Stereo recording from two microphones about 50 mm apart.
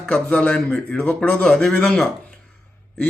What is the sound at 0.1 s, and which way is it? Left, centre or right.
A man's voice, left.